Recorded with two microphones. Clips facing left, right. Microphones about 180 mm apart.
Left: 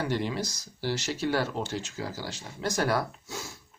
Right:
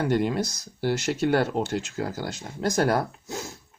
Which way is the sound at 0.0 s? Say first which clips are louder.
Right 6 dB; 50° right (ahead or behind).